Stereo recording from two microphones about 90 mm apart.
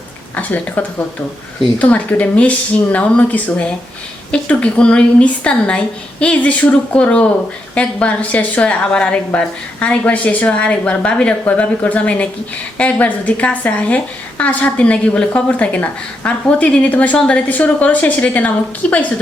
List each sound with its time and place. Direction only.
0.3 s a woman's voice: 20° left (ahead or behind)